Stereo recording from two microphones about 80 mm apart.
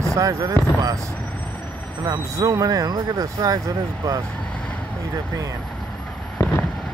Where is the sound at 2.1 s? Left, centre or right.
Right.